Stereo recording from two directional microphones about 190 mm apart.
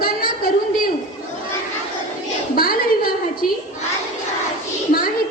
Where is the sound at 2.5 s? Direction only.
50° left (ahead or behind).